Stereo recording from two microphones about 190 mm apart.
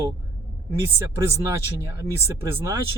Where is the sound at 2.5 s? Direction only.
15° right (ahead or behind).